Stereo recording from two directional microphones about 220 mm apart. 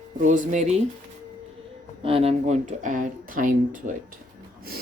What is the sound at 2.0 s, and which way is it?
Speech, 25° right (ahead or behind).